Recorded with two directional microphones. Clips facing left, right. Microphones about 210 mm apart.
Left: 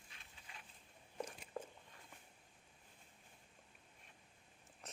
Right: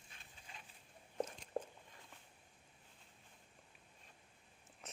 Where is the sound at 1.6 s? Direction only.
40° right (ahead or behind).